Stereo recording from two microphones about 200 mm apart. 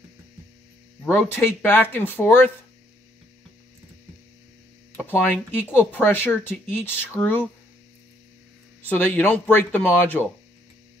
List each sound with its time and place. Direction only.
1.0 s speech: 10° left (ahead or behind)
4.9 s speech: 10° left (ahead or behind)
8.8 s speech: 10° left (ahead or behind)